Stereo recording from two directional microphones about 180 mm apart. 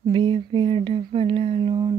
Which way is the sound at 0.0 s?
25° right (ahead or behind).